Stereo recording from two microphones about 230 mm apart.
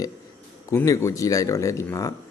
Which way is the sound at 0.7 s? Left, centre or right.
Centre.